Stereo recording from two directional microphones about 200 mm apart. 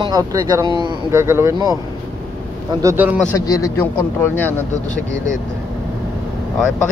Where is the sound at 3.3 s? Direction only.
15° left (ahead or behind).